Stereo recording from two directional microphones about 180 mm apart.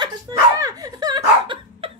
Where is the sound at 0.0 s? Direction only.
20° right (ahead or behind).